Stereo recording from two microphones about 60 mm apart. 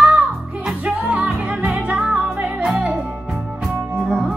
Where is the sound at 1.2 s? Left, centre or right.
Centre.